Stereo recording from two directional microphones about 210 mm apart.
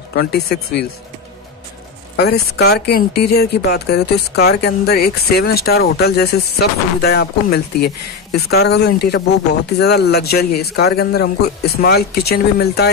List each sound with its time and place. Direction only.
0.1 s speech: 50° left (ahead or behind)
2.1 s speech: 50° left (ahead or behind)